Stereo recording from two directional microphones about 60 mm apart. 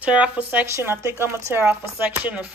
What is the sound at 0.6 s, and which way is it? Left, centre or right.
A woman's voice, right.